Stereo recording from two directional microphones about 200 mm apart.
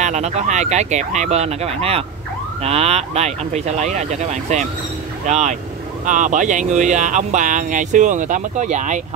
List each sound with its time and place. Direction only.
0.0 s speech: 35° right (ahead or behind)